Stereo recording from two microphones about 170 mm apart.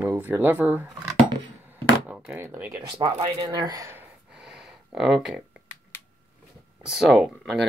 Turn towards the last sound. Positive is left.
turn(degrees=0)  # may be behind; listen again after turning